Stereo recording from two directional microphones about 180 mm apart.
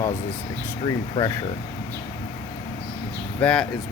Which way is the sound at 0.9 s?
20° left (ahead or behind).